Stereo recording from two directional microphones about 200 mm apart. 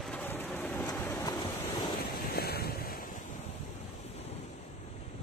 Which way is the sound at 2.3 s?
50° left (ahead or behind).